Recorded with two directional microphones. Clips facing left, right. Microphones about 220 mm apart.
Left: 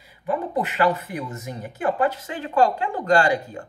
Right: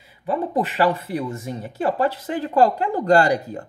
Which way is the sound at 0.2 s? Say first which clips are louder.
Right 2 dB; 30° right (ahead or behind).